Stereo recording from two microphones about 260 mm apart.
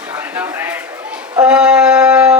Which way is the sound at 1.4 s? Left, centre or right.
Centre.